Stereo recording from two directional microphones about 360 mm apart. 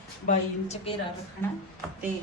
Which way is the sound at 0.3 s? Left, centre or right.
Centre.